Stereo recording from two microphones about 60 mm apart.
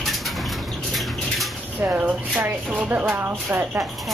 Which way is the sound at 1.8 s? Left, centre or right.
Right.